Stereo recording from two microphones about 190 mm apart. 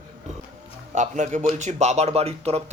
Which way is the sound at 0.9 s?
40° right (ahead or behind).